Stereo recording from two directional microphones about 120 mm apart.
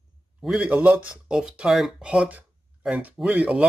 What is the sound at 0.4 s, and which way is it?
Speech, 10° right (ahead or behind).